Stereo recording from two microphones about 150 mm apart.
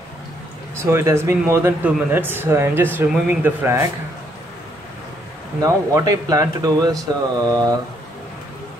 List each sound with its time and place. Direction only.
0.8 s speech: 15° right (ahead or behind)
5.6 s speech: 25° right (ahead or behind)